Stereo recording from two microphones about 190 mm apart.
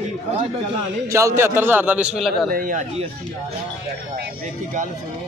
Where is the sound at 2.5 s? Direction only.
45° right (ahead or behind).